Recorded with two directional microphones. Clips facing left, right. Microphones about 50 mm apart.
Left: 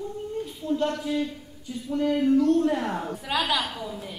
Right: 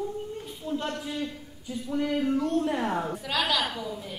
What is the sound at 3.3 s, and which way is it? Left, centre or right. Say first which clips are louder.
Speech: left 2 dB; centre.